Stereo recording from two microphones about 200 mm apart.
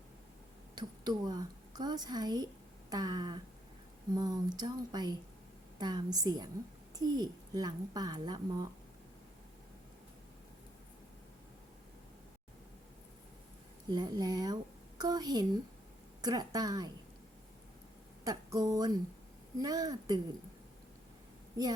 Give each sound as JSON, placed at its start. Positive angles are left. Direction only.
{"t": 0.8, "sound": "a woman's voice", "side_deg": -20}
{"t": 13.9, "sound": "speech", "side_deg": -20}
{"t": 18.3, "sound": "speech", "side_deg": -20}
{"t": 21.6, "sound": "speech", "side_deg": -15}